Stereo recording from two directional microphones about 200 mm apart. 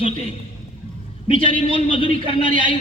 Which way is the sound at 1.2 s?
25° left (ahead or behind).